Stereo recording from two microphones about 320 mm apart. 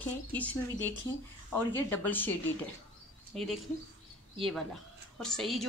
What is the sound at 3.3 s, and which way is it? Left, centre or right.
A woman's voice, centre.